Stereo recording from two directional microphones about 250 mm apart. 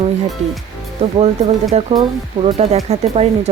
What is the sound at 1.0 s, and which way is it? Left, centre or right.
Speech, right.